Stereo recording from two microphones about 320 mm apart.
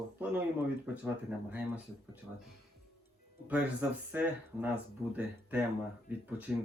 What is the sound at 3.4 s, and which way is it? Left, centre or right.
Speech, centre.